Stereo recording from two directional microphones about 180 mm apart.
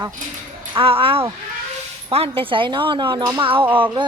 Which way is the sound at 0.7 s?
30° right (ahead or behind).